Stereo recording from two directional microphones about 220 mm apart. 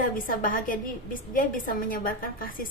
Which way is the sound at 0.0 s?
40° left (ahead or behind).